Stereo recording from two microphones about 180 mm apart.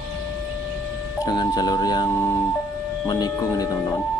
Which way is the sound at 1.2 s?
20° left (ahead or behind).